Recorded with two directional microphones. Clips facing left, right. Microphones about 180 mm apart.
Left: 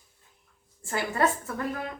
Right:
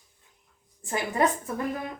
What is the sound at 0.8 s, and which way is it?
Speech, 15° right (ahead or behind).